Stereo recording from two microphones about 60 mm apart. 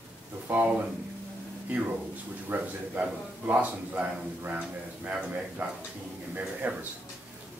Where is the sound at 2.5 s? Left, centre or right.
Right.